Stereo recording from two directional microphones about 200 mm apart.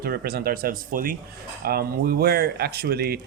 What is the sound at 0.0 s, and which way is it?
Speech, 50° right (ahead or behind).